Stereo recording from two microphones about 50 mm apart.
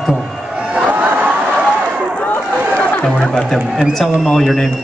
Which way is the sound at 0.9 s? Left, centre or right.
Right.